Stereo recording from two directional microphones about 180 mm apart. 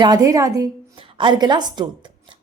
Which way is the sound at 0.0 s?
20° right (ahead or behind).